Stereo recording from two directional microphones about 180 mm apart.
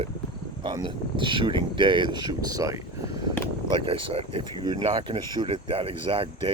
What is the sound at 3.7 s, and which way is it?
Speech, 30° right (ahead or behind).